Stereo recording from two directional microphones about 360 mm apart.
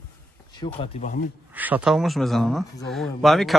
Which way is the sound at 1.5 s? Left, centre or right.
Centre.